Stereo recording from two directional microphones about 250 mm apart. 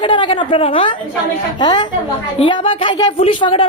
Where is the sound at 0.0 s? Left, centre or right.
Centre.